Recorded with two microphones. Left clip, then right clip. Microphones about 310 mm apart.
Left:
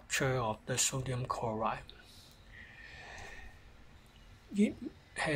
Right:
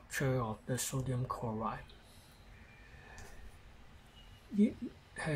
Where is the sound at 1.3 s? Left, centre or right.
Left.